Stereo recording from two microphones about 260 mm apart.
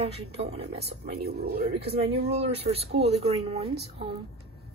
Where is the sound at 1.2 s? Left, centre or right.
Right.